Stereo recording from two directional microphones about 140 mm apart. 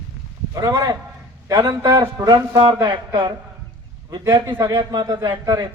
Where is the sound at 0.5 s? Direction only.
25° right (ahead or behind).